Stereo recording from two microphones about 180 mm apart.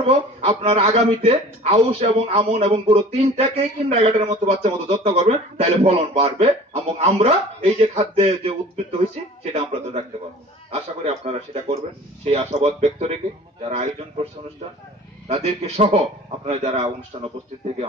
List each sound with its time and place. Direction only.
0.0 s a woman's voice: 35° right (ahead or behind)
15.2 s a man's voice: 35° right (ahead or behind)